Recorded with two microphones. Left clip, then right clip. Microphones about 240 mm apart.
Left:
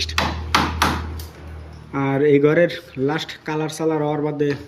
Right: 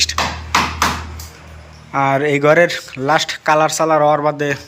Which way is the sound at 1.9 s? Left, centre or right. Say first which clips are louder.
Right 2 dB; centre.